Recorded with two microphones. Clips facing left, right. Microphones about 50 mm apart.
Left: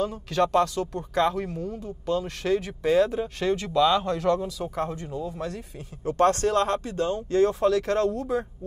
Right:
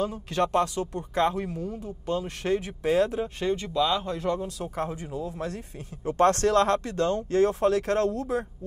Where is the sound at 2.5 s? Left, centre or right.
Left.